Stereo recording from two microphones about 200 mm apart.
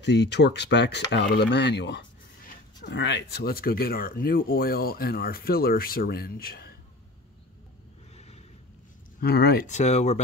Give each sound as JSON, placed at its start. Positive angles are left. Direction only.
{"t": 0.0, "sound": "speech", "side_deg": 60}
{"t": 9.2, "sound": "speech", "side_deg": 50}
{"t": 9.7, "sound": "speech", "side_deg": 35}